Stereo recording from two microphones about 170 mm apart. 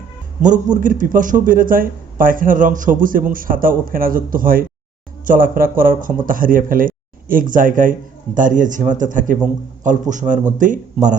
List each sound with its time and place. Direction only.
0.4 s a man's voice: 45° right (ahead or behind)